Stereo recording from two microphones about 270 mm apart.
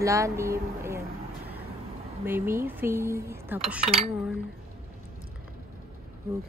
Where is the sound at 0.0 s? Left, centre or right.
Centre.